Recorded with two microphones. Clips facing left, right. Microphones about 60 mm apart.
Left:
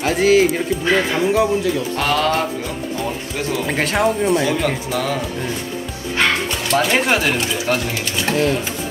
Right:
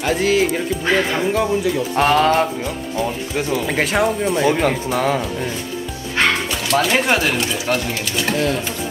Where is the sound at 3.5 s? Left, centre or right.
Centre.